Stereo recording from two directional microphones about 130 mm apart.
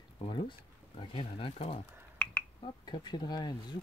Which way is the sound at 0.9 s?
40° left (ahead or behind).